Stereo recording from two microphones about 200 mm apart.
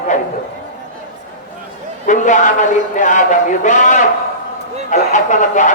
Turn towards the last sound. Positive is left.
turn(degrees=40)  # may be behind; listen again after turning